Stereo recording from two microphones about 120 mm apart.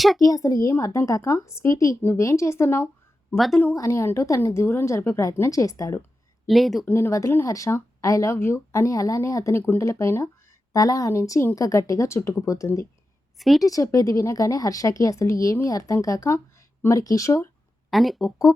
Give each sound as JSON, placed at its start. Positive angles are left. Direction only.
{"t": 0.2, "sound": "speech", "side_deg": 30}
{"t": 3.3, "sound": "speech", "side_deg": 0}
{"t": 3.8, "sound": "speech", "side_deg": 25}
{"t": 6.5, "sound": "speech", "side_deg": 0}
{"t": 6.8, "sound": "speech", "side_deg": 20}
{"t": 13.4, "sound": "speech", "side_deg": 0}
{"t": 13.7, "sound": "speech", "side_deg": 30}
{"t": 17.9, "sound": "speech", "side_deg": 0}
{"t": 18.5, "sound": "music", "side_deg": 25}